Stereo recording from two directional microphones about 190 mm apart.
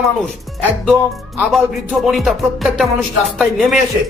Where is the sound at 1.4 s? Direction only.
Centre (ahead or behind).